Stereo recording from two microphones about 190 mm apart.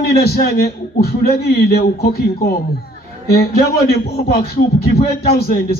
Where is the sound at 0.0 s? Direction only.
55° left (ahead or behind).